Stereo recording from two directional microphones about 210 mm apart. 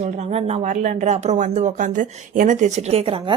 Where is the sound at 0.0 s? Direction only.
30° right (ahead or behind).